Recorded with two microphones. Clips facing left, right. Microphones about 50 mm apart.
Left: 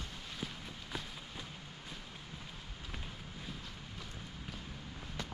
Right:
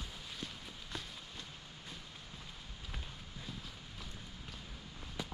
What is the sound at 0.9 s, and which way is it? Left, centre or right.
Run, centre.